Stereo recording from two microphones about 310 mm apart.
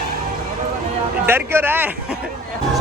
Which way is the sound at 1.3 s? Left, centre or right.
Centre.